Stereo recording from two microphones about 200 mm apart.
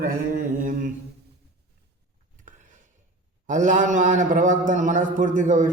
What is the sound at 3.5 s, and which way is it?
A man's voice, 40° right (ahead or behind).